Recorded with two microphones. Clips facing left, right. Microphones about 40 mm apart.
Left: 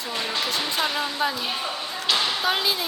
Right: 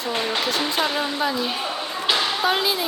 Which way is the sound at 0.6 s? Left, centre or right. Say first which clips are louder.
Right 3 dB; centre.